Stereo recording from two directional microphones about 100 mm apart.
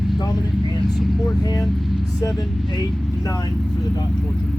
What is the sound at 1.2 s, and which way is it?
Speech, 40° left (ahead or behind).